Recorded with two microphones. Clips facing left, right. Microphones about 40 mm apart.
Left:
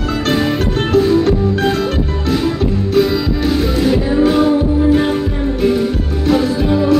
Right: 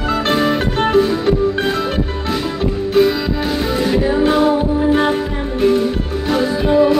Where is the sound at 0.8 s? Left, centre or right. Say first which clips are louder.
Left 3 dB; right.